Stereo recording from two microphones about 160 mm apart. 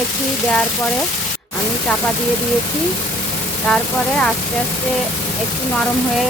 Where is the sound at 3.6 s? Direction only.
5° left (ahead or behind).